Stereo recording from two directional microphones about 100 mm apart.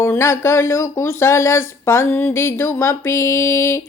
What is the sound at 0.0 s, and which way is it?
Speech, 25° left (ahead or behind).